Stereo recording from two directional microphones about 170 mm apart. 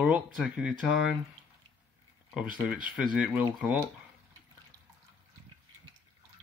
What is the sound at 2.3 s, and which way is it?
Speech, 5° right (ahead or behind).